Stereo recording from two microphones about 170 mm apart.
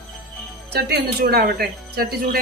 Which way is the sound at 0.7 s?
70° right (ahead or behind).